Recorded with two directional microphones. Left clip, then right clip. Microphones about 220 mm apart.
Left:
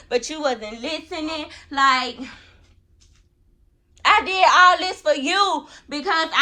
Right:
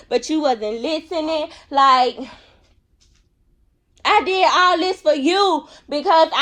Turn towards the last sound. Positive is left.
turn(degrees=-15)  # may be behind; listen again after turning